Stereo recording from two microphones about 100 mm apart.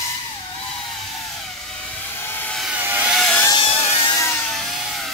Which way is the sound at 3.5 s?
65° left (ahead or behind).